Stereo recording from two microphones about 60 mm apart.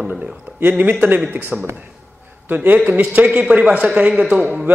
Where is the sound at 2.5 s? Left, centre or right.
Right.